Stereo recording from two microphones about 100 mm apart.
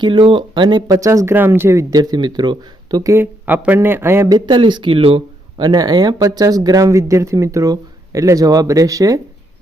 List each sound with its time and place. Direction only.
0.0 s speech: 60° right (ahead or behind)
0.9 s speech: 35° right (ahead or behind)
2.0 s speech: 45° right (ahead or behind)
3.0 s speech: 30° right (ahead or behind)
3.4 s a man's voice: 15° right (ahead or behind)
4.3 s speech: 45° right (ahead or behind)
5.5 s speech: 40° right (ahead or behind)